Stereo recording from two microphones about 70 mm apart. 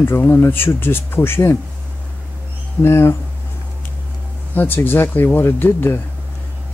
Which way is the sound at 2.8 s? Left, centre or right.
Left.